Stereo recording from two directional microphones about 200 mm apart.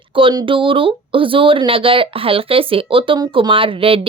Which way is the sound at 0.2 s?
25° right (ahead or behind).